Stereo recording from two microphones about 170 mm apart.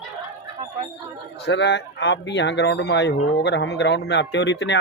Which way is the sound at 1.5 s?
90° left.